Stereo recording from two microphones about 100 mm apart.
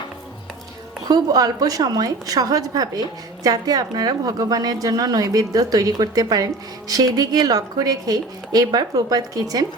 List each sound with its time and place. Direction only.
1.0 s a woman's voice: 40° right (ahead or behind)